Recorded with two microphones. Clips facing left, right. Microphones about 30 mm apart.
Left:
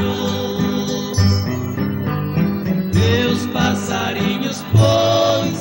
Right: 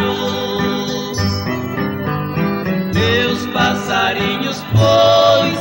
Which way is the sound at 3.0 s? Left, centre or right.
Centre.